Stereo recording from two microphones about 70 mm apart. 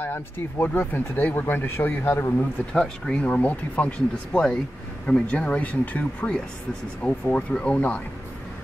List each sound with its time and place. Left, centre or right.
0.0 s speech: left
2.3 s speech: centre